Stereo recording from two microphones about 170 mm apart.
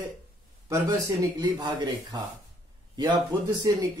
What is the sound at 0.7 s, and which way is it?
A man's voice, 20° right (ahead or behind).